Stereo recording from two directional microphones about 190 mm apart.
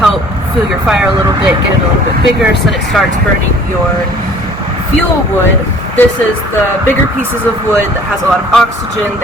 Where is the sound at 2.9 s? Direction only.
Centre (ahead or behind).